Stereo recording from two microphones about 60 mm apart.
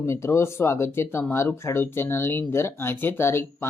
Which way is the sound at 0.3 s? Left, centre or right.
Left.